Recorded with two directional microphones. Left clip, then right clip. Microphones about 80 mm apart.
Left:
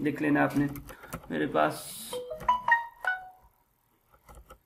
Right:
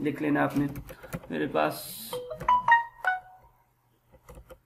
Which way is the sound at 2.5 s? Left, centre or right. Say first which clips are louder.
Right 4 dB; right.